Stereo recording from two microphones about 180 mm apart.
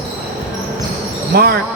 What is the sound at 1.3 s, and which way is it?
Speech, 55° right (ahead or behind).